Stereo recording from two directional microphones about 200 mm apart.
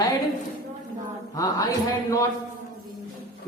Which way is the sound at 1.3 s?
15° left (ahead or behind).